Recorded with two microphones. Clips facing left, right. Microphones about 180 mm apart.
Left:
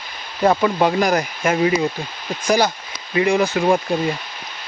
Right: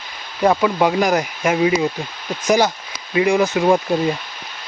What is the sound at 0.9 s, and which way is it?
Speech, 15° right (ahead or behind).